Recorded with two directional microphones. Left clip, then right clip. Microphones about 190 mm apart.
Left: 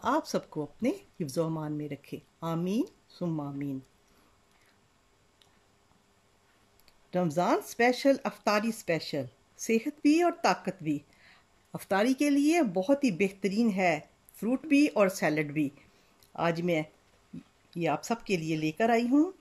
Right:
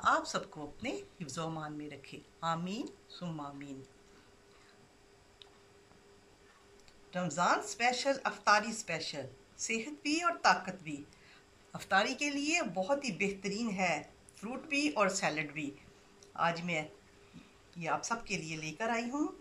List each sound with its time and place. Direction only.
0.0 s speech: 45° left (ahead or behind)
7.1 s speech: 45° left (ahead or behind)